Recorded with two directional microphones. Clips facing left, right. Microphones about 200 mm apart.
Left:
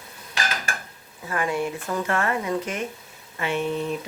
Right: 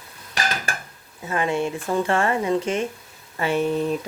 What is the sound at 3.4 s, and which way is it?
Speech, 40° right (ahead or behind).